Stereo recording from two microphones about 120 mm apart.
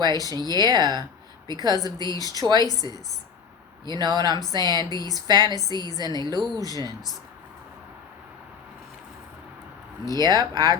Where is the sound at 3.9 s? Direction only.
35° right (ahead or behind).